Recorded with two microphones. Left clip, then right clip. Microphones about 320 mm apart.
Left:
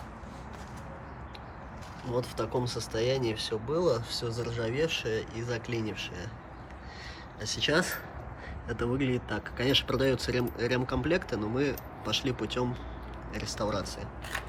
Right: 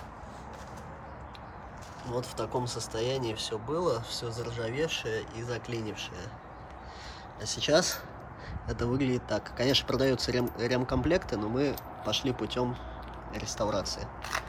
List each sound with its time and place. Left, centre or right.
2.0 s speech: centre
7.5 s speech: centre